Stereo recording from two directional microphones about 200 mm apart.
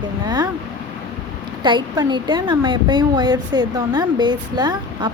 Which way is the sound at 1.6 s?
20° right (ahead or behind).